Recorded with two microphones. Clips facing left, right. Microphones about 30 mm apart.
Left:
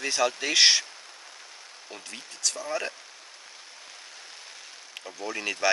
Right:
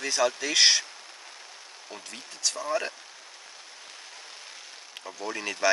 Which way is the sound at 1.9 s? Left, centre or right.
Centre.